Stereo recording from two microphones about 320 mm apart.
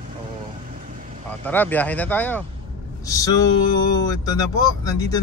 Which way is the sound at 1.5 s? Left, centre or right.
Centre.